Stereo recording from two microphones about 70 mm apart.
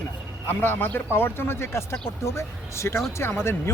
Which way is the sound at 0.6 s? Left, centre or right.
Left.